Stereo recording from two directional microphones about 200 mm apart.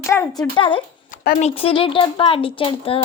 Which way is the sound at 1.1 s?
50° left (ahead or behind).